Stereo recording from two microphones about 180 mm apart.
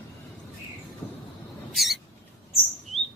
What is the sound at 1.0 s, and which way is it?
Vehicle, 10° left (ahead or behind).